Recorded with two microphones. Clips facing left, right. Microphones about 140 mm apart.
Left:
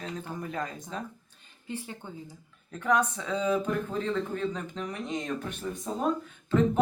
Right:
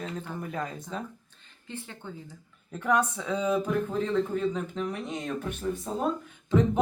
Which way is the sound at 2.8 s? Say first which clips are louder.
Even; 10° right (ahead or behind).